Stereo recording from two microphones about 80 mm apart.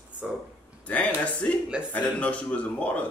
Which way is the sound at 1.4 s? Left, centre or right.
Centre.